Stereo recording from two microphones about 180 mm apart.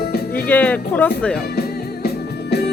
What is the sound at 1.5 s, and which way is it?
Music, 60° left (ahead or behind).